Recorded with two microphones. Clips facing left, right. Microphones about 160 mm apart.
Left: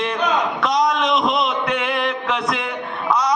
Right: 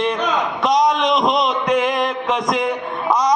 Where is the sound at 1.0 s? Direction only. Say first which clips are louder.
Right 2 dB; 5° left (ahead or behind).